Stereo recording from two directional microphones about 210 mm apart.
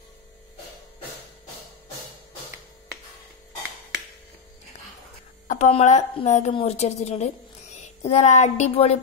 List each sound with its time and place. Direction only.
5.5 s a woman's voice: 35° left (ahead or behind)